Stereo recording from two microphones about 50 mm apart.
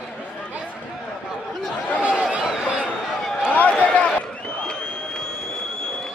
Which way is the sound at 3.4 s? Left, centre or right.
Left.